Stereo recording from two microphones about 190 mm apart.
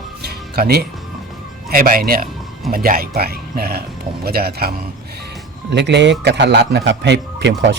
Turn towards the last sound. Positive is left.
turn(degrees=-70)  # may be behind; listen again after turning